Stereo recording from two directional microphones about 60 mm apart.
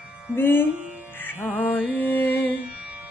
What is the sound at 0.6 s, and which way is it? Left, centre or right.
Music, centre.